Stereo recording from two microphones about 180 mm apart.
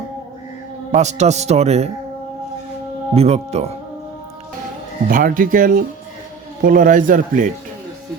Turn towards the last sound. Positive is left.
turn(degrees=-50)  # may be behind; listen again after turning